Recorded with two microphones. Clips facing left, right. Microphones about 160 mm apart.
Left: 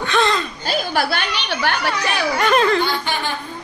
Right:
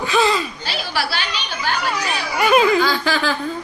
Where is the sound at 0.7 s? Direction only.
50° left (ahead or behind); by 1.8 s 65° left (ahead or behind).